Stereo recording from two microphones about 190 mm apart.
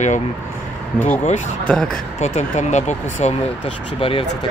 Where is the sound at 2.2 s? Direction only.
35° left (ahead or behind).